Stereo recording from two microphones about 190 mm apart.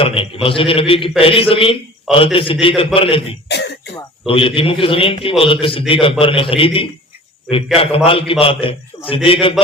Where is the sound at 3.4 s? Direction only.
60° left (ahead or behind).